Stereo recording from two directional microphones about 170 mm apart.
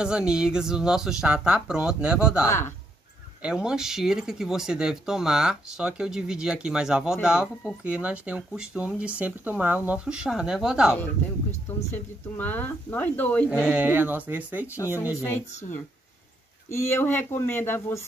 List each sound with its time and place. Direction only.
0.0 s speech: 5° right (ahead or behind)
2.4 s speech: 15° left (ahead or behind)
3.4 s speech: 5° right (ahead or behind)
11.9 s speech: 10° left (ahead or behind)
13.5 s speech: 5° right (ahead or behind)
15.2 s speech: 10° left (ahead or behind)